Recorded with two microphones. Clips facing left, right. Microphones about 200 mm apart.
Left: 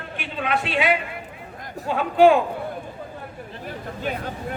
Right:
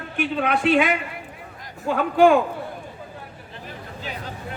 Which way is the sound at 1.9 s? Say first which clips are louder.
Even; 45° right (ahead or behind).